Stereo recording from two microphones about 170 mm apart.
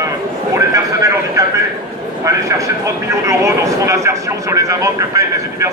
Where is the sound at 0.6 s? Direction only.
20° right (ahead or behind).